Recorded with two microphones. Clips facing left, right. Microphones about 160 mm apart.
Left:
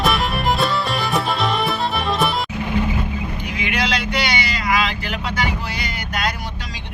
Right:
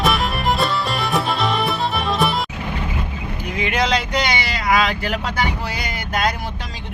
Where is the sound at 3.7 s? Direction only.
45° right (ahead or behind).